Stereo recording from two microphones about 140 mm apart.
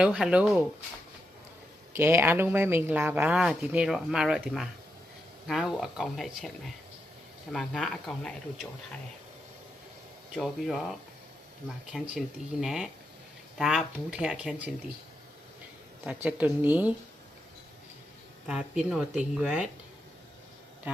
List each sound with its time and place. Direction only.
0.0 s speech: 5° right (ahead or behind)
2.0 s speech: 20° right (ahead or behind); by 6.5 s centre (ahead or behind)
7.5 s speech: centre (ahead or behind)
10.3 s speech: centre (ahead or behind)
11.9 s speech: 10° right (ahead or behind)
16.0 s speech: 10° right (ahead or behind)
18.4 s speech: 5° right (ahead or behind)